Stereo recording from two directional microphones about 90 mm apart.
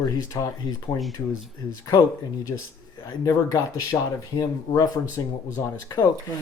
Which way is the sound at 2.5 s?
45° left (ahead or behind).